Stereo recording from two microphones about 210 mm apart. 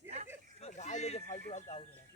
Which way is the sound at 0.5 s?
30° left (ahead or behind).